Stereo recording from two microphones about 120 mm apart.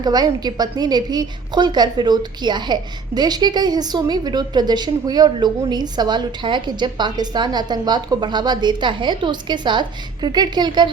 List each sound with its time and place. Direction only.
0.0 s a woman's voice: 35° right (ahead or behind)